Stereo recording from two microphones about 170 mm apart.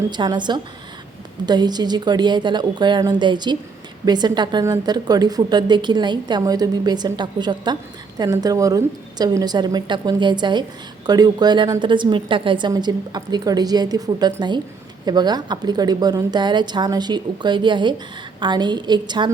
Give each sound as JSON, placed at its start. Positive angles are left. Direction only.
{"t": 0.1, "sound": "a woman's voice", "side_deg": -25}